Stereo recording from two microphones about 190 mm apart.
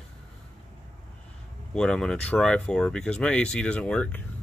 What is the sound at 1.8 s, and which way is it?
Speech, 5° left (ahead or behind).